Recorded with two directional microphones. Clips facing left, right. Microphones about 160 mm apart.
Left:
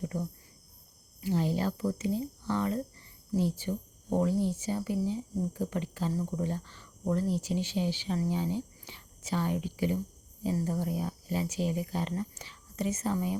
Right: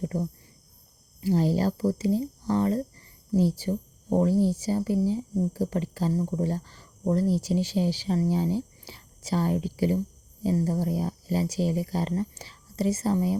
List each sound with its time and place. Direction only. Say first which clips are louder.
0.0 s cricket: right 5 dB; 40° right (ahead or behind)
1.2 s speech: right 6 dB; 35° right (ahead or behind)